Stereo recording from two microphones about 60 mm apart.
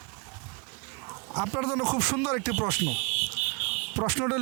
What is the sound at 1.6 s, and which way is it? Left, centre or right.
Speech, centre.